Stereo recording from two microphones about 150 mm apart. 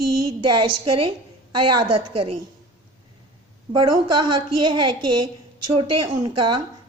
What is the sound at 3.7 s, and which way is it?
A woman's voice, 30° right (ahead or behind).